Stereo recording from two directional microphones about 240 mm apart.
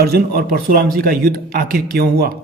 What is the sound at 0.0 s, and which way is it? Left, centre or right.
A man's voice, right.